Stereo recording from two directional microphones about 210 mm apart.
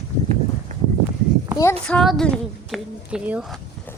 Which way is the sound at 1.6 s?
10° left (ahead or behind).